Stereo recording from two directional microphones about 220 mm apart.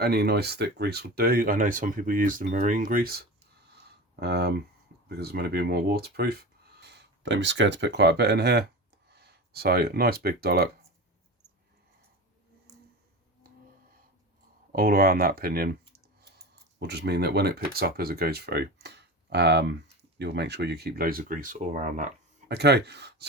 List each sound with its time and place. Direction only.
0.0 s speech: 45° right (ahead or behind)
14.7 s speech: 40° right (ahead or behind)
16.8 s speech: 50° right (ahead or behind)
22.4 s speech: 50° right (ahead or behind)